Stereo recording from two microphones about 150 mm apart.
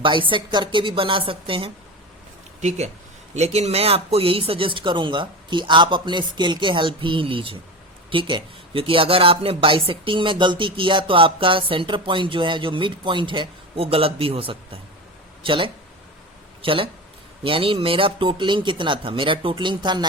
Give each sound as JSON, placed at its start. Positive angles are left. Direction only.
{"t": 0.0, "sound": "speech", "side_deg": -35}
{"t": 2.6, "sound": "speech", "side_deg": -50}